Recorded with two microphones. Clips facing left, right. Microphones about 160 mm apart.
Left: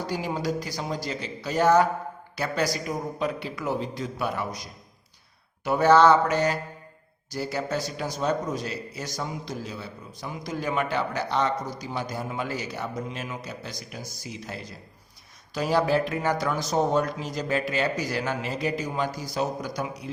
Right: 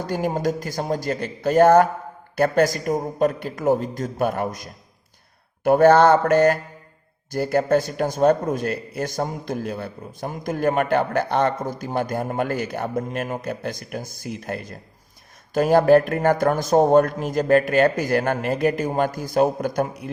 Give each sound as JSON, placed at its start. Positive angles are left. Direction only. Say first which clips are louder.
{"t": 0.0, "sound": "a man's voice", "louder": "right 6 dB", "side_deg": -50}